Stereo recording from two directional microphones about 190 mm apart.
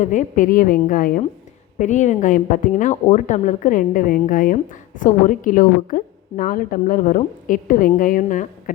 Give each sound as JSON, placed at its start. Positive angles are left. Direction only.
{"t": 0.0, "sound": "a woman's voice", "side_deg": 40}